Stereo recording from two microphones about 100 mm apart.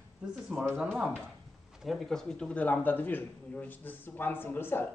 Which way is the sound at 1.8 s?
5° left (ahead or behind).